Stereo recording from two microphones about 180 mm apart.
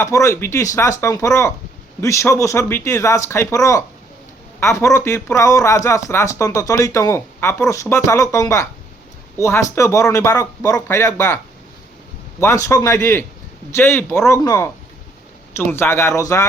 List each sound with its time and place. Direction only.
0.0 s speech: 15° left (ahead or behind)
12.4 s speech: 15° left (ahead or behind)